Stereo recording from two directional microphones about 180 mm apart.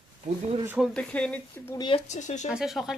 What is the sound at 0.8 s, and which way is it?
Speech, 5° left (ahead or behind).